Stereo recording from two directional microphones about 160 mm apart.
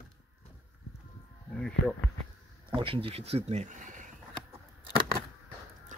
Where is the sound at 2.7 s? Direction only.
35° right (ahead or behind); by 4.0 s 50° right (ahead or behind).